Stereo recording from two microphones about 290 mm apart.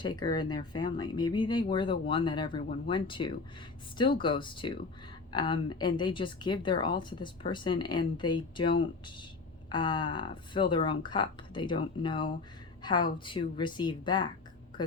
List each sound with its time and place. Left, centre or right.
0.0 s a woman's voice: centre